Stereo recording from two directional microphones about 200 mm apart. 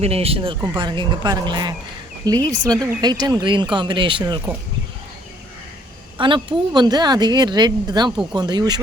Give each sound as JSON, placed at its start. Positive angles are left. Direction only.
{"t": 0.0, "sound": "speech", "side_deg": -30}
{"t": 6.1, "sound": "speech", "side_deg": -25}